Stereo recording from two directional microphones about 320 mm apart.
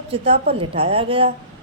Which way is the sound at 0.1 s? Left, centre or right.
Centre.